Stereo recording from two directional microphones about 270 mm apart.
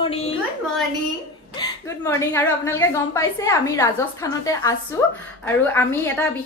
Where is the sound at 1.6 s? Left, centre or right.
Centre.